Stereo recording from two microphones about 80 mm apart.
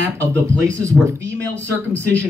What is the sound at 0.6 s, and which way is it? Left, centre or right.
Speech, right.